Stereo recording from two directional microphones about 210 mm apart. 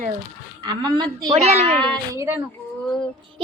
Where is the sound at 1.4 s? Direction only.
30° right (ahead or behind).